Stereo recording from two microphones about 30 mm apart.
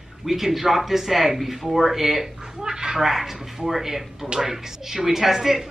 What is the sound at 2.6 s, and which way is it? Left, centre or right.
Speech, right.